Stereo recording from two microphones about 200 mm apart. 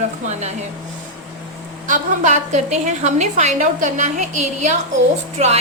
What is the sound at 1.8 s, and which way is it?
A woman's voice, 40° right (ahead or behind).